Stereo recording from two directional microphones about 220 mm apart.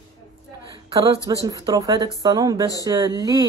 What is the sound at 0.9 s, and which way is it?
Speech, 25° right (ahead or behind).